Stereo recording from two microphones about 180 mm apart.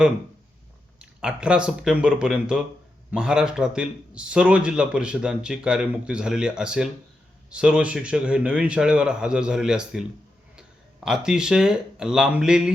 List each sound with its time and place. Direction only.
0.9 s a man's voice: 5° right (ahead or behind)